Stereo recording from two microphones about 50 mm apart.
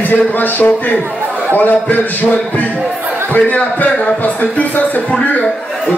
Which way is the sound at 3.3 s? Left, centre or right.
Left.